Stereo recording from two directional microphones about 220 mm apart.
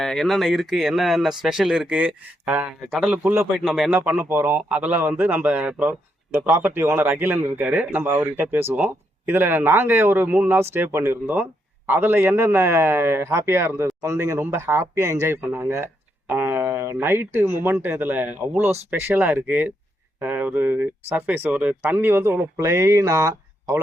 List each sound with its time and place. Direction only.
0.0 s speech: centre (ahead or behind); by 23.8 s 15° right (ahead or behind)